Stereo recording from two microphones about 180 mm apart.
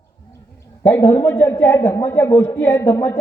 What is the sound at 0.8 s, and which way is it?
A man's voice, 15° left (ahead or behind).